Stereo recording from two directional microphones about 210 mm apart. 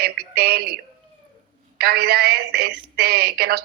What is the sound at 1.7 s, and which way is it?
A woman's voice, 50° right (ahead or behind).